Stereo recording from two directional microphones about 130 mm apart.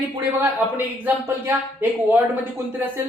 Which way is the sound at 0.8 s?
15° right (ahead or behind).